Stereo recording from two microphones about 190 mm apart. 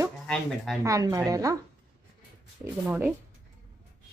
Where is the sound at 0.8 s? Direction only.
15° right (ahead or behind).